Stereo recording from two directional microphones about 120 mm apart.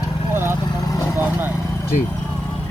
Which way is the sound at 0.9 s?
30° left (ahead or behind).